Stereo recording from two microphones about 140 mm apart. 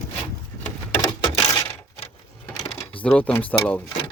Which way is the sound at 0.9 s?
25° left (ahead or behind).